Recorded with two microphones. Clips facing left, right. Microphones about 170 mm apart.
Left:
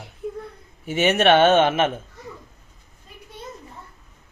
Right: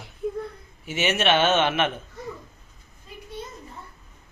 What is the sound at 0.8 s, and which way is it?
Speech, 50° left (ahead or behind).